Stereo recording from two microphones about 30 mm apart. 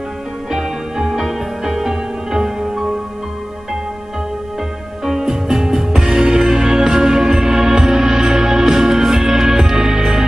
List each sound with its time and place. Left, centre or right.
0.5 s music: centre
5.0 s music: centre